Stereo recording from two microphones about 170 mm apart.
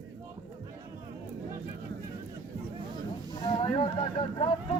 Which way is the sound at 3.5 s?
30° left (ahead or behind).